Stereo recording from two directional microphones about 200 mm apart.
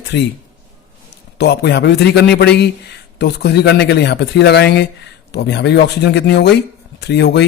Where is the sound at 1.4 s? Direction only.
55° left (ahead or behind).